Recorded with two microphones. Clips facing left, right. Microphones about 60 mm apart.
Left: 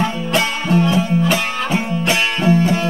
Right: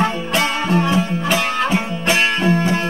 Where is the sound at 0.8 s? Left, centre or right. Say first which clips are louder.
Left 2 dB; right.